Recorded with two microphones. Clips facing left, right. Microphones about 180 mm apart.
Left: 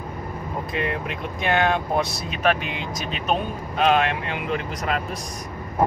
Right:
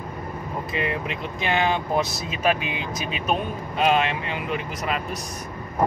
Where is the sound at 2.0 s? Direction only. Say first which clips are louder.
Even; centre (ahead or behind).